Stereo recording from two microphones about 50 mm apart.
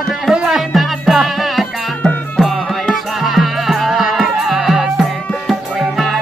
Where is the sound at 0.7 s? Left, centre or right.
Centre.